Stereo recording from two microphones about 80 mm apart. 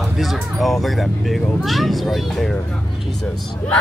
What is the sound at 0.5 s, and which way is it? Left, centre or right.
Speech, centre.